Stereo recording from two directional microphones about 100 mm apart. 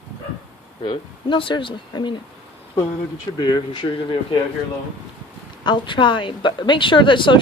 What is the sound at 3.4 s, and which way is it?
Speech, 50° left (ahead or behind).